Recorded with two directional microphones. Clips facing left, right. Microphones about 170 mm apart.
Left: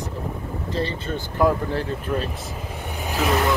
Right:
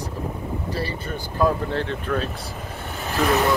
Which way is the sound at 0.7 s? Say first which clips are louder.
Left 2 dB; 20° left (ahead or behind).